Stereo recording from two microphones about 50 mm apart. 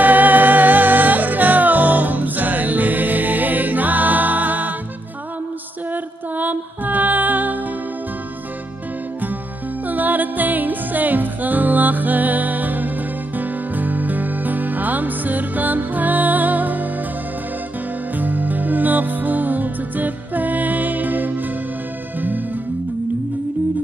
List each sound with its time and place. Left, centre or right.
0.0 s music: right
6.3 s music: right
9.8 s music: right
18.1 s music: right